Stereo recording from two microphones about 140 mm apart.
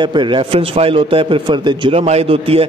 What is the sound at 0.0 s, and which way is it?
A man's voice, 35° right (ahead or behind).